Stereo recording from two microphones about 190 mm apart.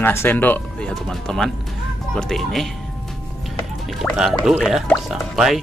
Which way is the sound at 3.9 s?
Centre (ahead or behind).